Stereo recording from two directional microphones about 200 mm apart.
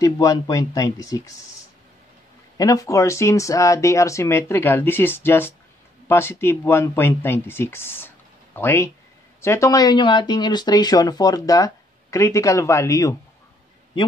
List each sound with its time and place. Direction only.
0.0 s speech: 15° left (ahead or behind)
2.5 s speech: 20° left (ahead or behind)